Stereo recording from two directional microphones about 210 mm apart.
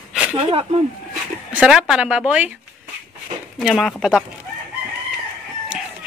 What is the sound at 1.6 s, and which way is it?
Speech, 5° right (ahead or behind).